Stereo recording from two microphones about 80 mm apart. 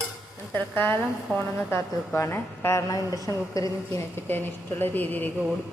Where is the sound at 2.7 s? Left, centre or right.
Left.